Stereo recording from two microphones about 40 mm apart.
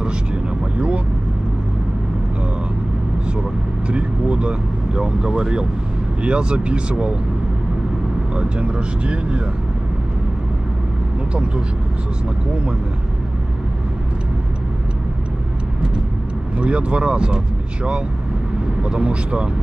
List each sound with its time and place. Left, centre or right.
0.7 s vehicle: right
3.9 s speech: right
8.4 s speech: right
16.5 s speech: right
18.8 s speech: right